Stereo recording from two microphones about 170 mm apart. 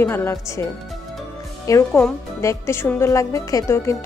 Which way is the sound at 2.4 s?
15° left (ahead or behind).